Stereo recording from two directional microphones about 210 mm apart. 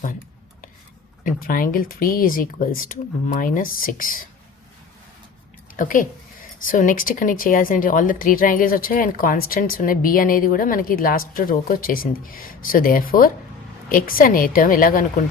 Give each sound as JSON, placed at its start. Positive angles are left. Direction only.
{"t": 1.2, "sound": "a woman's voice", "side_deg": 40}
{"t": 5.7, "sound": "a woman's voice", "side_deg": 40}